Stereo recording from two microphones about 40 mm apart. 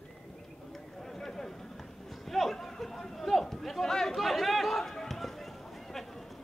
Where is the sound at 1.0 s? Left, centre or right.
Centre.